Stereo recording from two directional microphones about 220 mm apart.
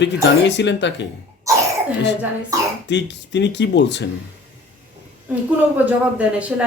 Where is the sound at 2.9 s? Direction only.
55° left (ahead or behind).